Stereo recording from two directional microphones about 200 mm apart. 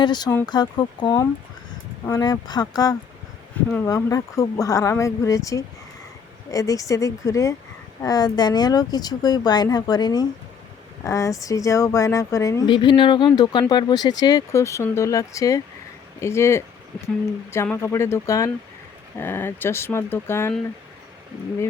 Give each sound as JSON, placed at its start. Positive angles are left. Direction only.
{"t": 0.0, "sound": "speech", "side_deg": 20}